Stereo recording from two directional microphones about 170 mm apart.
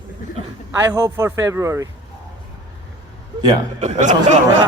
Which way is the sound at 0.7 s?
20° right (ahead or behind).